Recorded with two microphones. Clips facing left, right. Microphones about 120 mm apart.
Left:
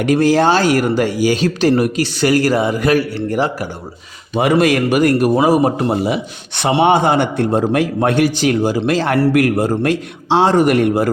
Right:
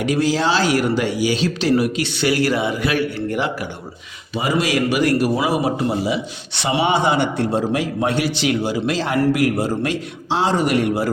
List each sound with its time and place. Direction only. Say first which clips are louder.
0.0 s speech: left 6 dB; 55° left (ahead or behind)
4.4 s a man's voice: left 6 dB; 60° left (ahead or behind)